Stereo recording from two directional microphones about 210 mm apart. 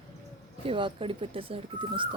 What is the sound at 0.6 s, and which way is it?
Speech, 25° right (ahead or behind).